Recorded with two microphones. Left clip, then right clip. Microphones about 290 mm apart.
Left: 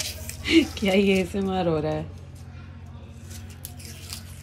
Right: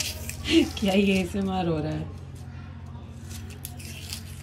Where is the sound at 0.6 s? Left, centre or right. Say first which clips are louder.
Left 2 dB; centre.